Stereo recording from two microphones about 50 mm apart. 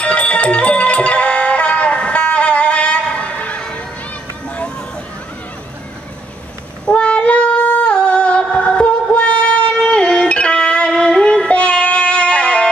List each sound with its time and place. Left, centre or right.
0.0 s music: left
6.9 s female singing: left
9.8 s music: centre